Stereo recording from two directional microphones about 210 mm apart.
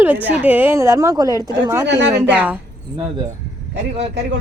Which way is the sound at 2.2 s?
5° right (ahead or behind).